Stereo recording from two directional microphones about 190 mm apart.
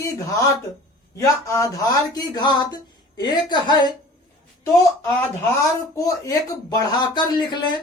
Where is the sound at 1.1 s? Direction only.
15° left (ahead or behind).